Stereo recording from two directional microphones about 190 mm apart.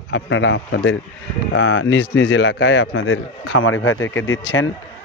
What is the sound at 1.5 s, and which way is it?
Speech, 90° left.